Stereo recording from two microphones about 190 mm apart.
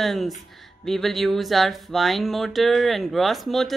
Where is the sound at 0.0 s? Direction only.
Centre (ahead or behind).